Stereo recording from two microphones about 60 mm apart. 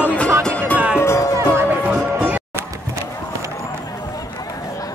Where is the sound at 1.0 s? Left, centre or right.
Left.